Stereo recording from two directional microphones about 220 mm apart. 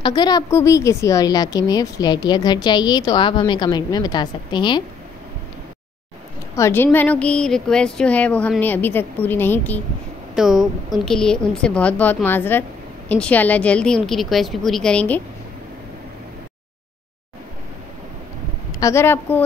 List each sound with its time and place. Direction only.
0.0 s a woman's voice: 20° left (ahead or behind)
6.5 s a woman's voice: 10° left (ahead or behind)
18.8 s speech: 15° left (ahead or behind)